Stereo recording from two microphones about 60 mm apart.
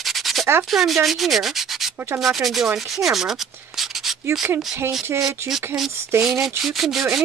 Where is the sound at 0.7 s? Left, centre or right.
Centre.